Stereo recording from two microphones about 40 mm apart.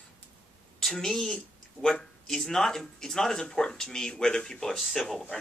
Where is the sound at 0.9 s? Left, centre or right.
Centre.